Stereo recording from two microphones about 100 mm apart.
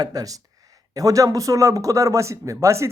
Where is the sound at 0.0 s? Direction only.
40° right (ahead or behind).